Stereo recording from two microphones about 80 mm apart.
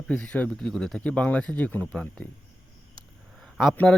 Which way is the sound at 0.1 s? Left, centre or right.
Centre.